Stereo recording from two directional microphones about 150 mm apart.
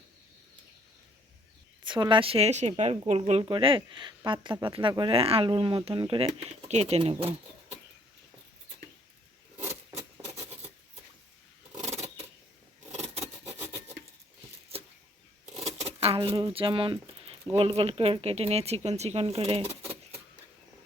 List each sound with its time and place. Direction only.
1.8 s a woman's voice: 30° right (ahead or behind)
9.6 s rub: 20° right (ahead or behind)
12.9 s scissors: 50° right (ahead or behind)
15.6 s a sound: 45° right (ahead or behind)
17.5 s speech: 40° right (ahead or behind)